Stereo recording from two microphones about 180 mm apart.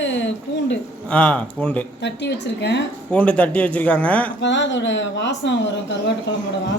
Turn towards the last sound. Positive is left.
turn(degrees=80)